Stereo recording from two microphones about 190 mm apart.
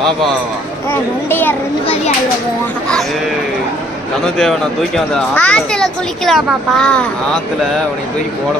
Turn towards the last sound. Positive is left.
turn(degrees=5)  # may be behind; listen again after turning